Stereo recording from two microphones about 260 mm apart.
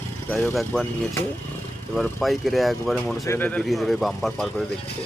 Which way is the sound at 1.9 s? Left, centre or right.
Centre.